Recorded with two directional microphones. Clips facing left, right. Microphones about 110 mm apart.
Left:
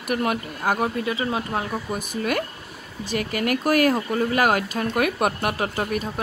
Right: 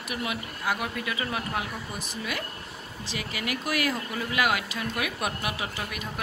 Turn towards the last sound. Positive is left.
turn(degrees=45)  # may be behind; listen again after turning